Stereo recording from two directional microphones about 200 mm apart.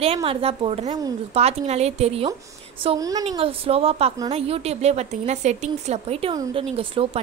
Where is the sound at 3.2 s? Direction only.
30° right (ahead or behind).